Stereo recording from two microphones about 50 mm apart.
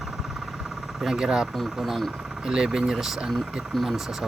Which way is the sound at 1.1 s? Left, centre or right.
Centre.